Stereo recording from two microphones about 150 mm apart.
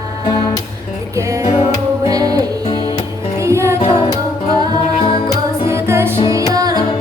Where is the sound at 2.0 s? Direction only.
25° right (ahead or behind).